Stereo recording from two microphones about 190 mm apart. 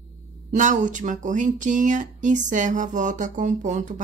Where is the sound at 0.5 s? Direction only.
40° right (ahead or behind).